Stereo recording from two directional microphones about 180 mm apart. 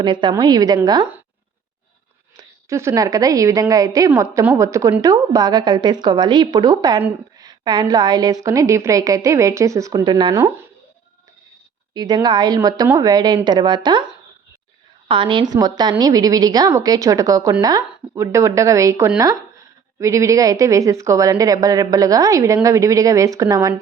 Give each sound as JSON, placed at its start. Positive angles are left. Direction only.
{"t": 0.0, "sound": "a woman's voice", "side_deg": -25}
{"t": 2.3, "sound": "a woman's voice", "side_deg": -15}
{"t": 11.9, "sound": "a woman's voice", "side_deg": -25}